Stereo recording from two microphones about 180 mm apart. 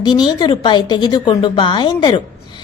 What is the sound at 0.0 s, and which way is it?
A woman's voice, 25° left (ahead or behind).